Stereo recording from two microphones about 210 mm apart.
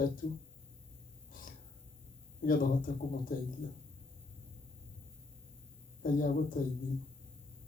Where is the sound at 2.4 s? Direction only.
40° left (ahead or behind).